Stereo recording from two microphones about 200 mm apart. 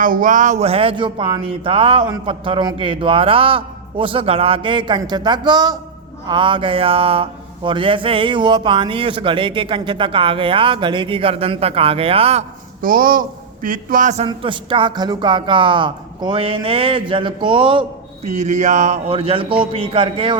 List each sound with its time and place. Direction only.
0.0 s music: 40° right (ahead or behind); by 1.4 s 25° right (ahead or behind)
1.6 s speech: 25° right (ahead or behind)
12.8 s speech: 45° right (ahead or behind)
14.3 s speech: 25° right (ahead or behind)